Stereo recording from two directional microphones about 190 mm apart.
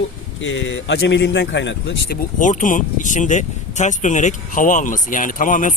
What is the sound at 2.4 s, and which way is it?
Speech, 40° left (ahead or behind).